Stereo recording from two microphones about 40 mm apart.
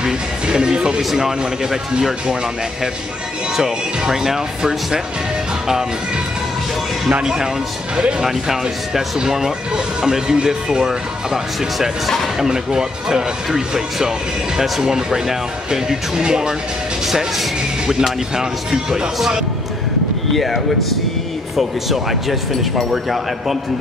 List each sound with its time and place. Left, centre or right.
0.0 s music: right
1.1 s speech: centre
4.1 s speech: centre
7.1 s speech: right
8.3 s speech: centre
12.4 s speech: centre
17.0 s speech: centre
20.2 s speech: centre